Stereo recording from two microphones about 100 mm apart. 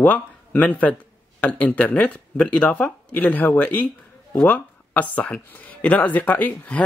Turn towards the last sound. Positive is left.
turn(degrees=15)  # may be behind; listen again after turning